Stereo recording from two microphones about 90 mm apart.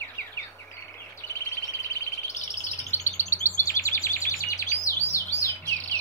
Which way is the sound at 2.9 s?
30° left (ahead or behind).